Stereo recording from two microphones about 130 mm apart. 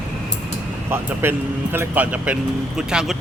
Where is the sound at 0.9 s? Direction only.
15° right (ahead or behind).